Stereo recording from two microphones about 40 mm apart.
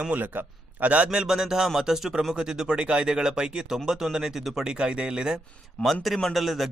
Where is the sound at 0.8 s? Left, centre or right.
Right.